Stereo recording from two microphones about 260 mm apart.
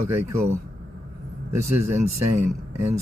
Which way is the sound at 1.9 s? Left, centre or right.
Right.